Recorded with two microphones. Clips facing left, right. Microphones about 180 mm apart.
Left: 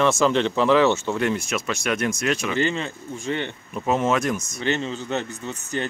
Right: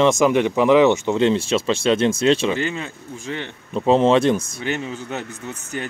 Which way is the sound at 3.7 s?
30° right (ahead or behind).